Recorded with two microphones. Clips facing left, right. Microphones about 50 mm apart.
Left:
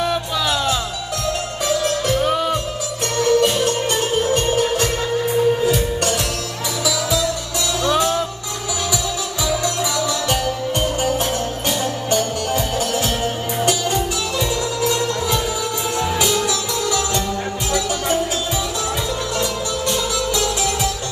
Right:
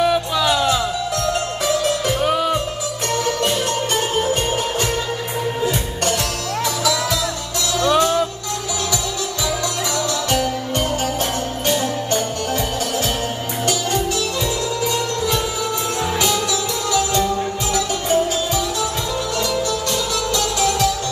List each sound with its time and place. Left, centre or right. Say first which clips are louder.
0.0 s music: right 3 dB; centre
2.0 s music: even; centre
7.8 s music: right 3 dB; centre
12.1 s music: left 1 dB; centre
16.0 s music: left 1 dB; centre
17.7 s music: right 2 dB; centre